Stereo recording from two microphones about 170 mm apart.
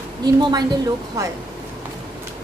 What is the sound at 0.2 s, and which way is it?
Speech, 25° right (ahead or behind).